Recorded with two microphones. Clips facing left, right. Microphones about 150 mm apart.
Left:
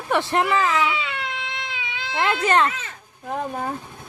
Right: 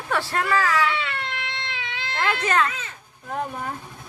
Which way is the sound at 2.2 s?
30° left (ahead or behind).